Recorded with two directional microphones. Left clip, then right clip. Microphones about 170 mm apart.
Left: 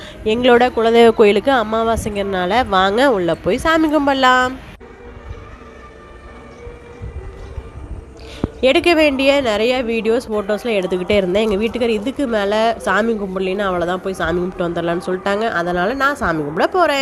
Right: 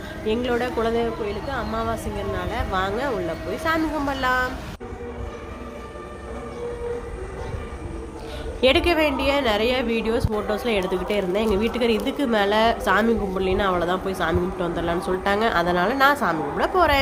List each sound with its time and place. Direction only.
0.3 s speech: 55° left (ahead or behind)
8.4 s a woman's voice: 40° left (ahead or behind)
11.6 s a woman's voice: 35° left (ahead or behind)